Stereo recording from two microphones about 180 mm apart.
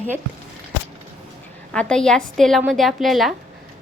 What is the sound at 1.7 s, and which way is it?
A woman's voice, 5° left (ahead or behind).